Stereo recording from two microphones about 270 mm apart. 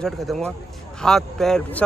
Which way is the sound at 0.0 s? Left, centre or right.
Centre.